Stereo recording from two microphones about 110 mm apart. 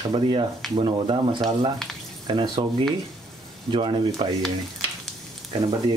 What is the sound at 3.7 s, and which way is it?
Speech, 50° right (ahead or behind).